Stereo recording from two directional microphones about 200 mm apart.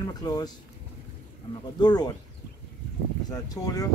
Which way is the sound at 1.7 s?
20° left (ahead or behind).